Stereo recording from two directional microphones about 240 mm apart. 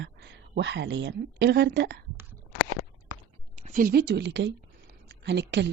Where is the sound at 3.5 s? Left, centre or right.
Right.